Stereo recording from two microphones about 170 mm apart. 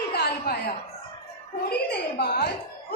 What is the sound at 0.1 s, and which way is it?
Chuckle, 65° left (ahead or behind).